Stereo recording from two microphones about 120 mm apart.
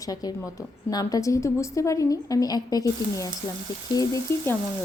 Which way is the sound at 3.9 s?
30° left (ahead or behind).